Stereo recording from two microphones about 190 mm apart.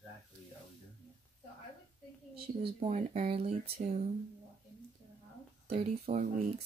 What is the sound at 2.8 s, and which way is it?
Speech, 35° right (ahead or behind).